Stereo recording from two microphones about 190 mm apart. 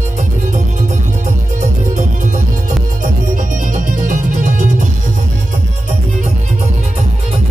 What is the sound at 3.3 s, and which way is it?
Music, 40° right (ahead or behind).